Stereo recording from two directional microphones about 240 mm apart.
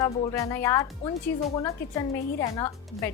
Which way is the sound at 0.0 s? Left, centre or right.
Centre.